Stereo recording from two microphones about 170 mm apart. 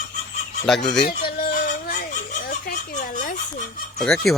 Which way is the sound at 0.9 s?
65° left (ahead or behind).